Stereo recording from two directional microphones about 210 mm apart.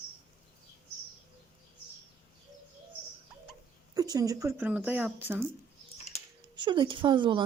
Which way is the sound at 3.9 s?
15° right (ahead or behind).